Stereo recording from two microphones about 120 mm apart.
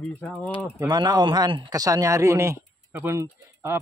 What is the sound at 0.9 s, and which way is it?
Speech, 35° right (ahead or behind).